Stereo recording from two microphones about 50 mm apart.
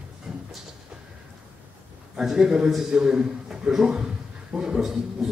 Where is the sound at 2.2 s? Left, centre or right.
Centre.